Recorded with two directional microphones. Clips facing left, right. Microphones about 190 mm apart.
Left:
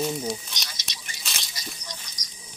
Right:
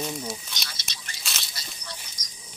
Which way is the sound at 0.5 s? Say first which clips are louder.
Even; 20° left (ahead or behind).